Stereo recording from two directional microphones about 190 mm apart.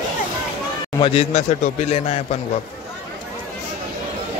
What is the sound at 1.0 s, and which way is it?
A man's voice, 30° left (ahead or behind).